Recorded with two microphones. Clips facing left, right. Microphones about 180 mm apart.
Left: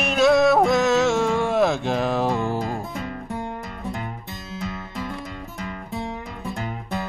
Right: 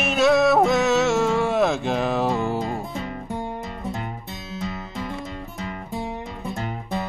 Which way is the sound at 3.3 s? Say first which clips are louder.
Right 2 dB; 20° right (ahead or behind).